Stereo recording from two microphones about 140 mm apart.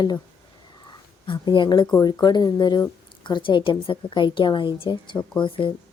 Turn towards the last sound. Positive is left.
turn(degrees=35)  # may be behind; listen again after turning